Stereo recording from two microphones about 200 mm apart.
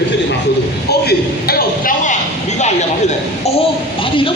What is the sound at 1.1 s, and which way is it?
Speech, 50° left (ahead or behind).